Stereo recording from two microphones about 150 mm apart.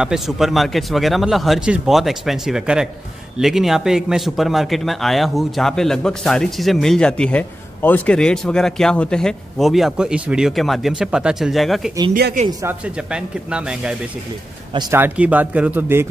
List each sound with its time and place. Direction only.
0.0 s speech: 5° right (ahead or behind)
12.1 s speech: 90° right
12.6 s a man's voice: 10° right (ahead or behind)